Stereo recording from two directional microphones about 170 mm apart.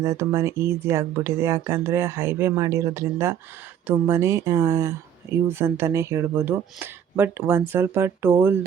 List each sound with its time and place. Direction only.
0.0 s speech: 15° right (ahead or behind)